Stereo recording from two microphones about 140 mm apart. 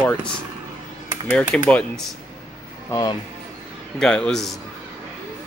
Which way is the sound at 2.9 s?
30° left (ahead or behind).